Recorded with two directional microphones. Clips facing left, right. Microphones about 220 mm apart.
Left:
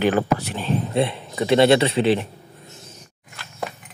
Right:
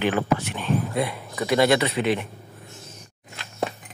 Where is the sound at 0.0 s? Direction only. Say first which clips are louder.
Left 3 dB; 40° left (ahead or behind).